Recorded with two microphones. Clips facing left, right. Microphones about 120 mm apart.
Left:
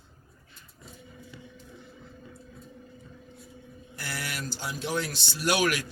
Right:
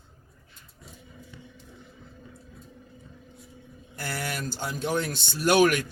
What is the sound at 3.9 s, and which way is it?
Speech, 50° right (ahead or behind).